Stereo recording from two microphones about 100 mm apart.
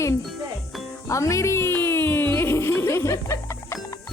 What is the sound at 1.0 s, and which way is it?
Music, 30° left (ahead or behind).